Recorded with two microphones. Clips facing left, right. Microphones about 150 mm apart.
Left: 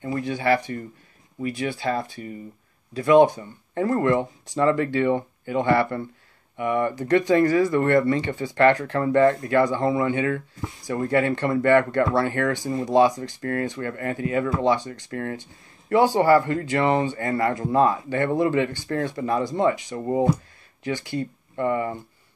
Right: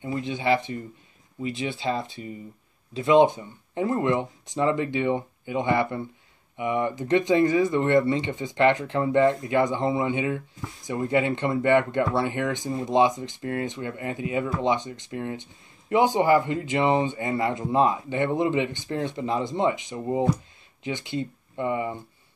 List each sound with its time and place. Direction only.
0.0 s speech: 20° right (ahead or behind)